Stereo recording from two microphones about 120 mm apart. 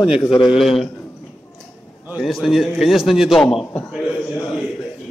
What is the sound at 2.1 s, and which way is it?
A man's voice, centre (ahead or behind).